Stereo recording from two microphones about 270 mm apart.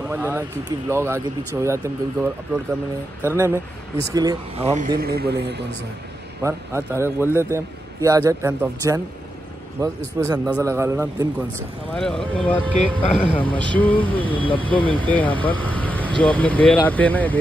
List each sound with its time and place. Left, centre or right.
0.1 s a man's voice: centre
3.3 s a man's voice: centre; by 5.7 s right
6.4 s a man's voice: centre
11.9 s speech: centre